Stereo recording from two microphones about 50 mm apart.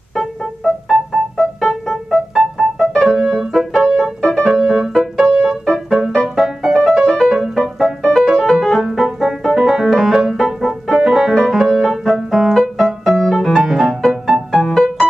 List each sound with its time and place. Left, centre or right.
0.1 s keyboard: centre
0.8 s keyboard: centre
2.0 s keyboard: centre
2.9 s piano: centre
3.3 s music: centre
4.5 s piano: centre
5.2 s music: centre
8.8 s keyboard: centre
9.2 s piano: centre
9.7 s keyboard: centre
13.7 s music: centre